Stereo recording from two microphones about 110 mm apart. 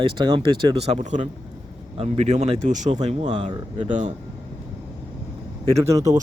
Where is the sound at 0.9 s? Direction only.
90° right.